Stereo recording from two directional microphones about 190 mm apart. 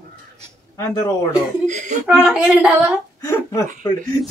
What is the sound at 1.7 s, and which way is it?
Speech, 40° right (ahead or behind).